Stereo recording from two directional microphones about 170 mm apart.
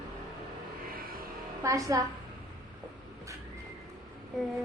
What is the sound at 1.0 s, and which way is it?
Music, 60° right (ahead or behind).